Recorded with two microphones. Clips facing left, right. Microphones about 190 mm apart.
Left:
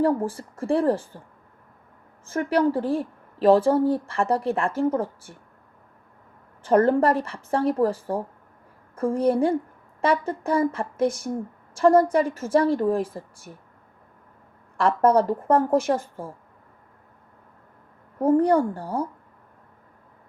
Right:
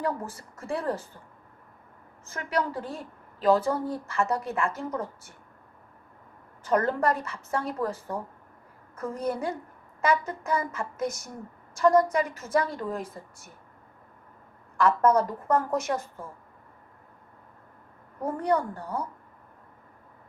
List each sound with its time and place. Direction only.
0.0 s speech: 30° left (ahead or behind)
2.2 s speech: 30° left (ahead or behind)
6.6 s speech: 30° left (ahead or behind)
14.8 s speech: 30° left (ahead or behind)
18.2 s speech: 30° left (ahead or behind)